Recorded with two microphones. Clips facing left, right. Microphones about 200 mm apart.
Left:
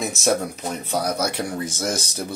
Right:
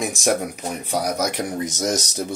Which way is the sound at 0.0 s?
15° right (ahead or behind).